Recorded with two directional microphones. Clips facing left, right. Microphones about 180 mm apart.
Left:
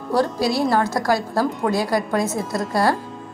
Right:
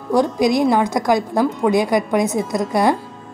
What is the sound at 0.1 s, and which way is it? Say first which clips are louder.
A woman's voice: right 4 dB; 15° right (ahead or behind).